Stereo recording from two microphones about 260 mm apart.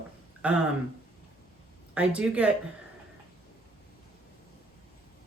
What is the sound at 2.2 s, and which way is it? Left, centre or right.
Speech, centre.